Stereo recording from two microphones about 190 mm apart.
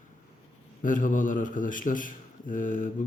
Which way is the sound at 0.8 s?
45° left (ahead or behind).